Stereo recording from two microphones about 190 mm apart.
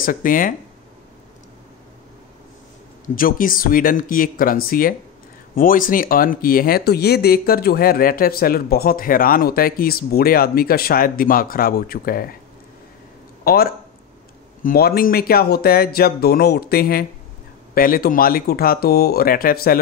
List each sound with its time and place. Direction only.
0.0 s speech: 45° left (ahead or behind)
3.2 s speech: 50° left (ahead or behind)
13.4 s a sound: 50° left (ahead or behind)
14.6 s speech: 50° left (ahead or behind)